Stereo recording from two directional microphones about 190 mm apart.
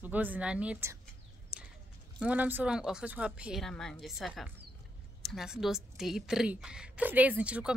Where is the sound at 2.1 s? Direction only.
5° right (ahead or behind).